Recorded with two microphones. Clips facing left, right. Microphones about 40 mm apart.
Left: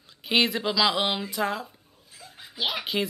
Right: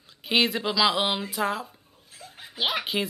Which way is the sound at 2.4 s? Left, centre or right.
Right.